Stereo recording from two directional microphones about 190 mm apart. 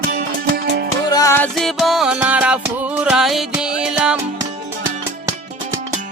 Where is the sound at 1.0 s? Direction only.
20° left (ahead or behind).